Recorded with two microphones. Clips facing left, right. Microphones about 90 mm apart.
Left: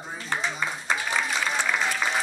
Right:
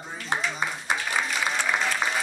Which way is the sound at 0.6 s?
15° right (ahead or behind).